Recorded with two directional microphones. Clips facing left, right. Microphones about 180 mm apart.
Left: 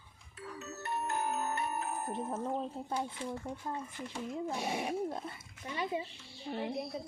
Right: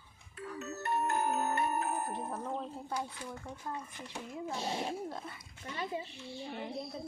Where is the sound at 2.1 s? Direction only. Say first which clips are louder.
Left 2 dB; 20° left (ahead or behind).